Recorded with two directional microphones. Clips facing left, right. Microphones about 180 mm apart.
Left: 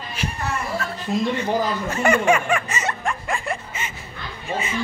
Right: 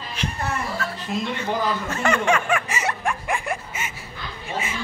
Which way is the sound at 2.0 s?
10° left (ahead or behind).